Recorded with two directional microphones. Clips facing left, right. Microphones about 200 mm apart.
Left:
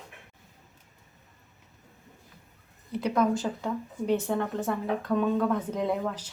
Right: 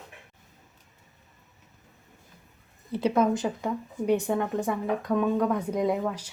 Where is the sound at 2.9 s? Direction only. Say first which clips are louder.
Right 2 dB; 30° right (ahead or behind).